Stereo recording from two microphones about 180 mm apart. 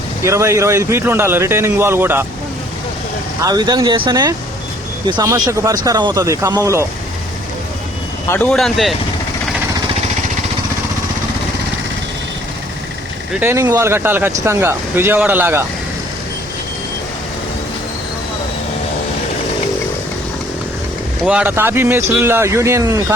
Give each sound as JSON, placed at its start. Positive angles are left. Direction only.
{"t": 0.2, "sound": "a man's voice", "side_deg": -15}
{"t": 3.4, "sound": "speech", "side_deg": -20}
{"t": 8.3, "sound": "speech", "side_deg": 5}
{"t": 13.4, "sound": "a man's voice", "side_deg": -15}
{"t": 21.2, "sound": "a man's voice", "side_deg": -10}